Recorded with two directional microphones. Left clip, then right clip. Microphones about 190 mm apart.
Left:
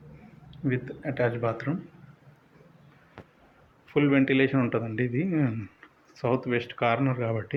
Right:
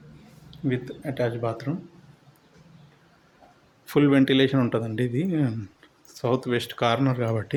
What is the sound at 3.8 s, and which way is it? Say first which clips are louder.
Speech: right 3 dB; 40° right (ahead or behind).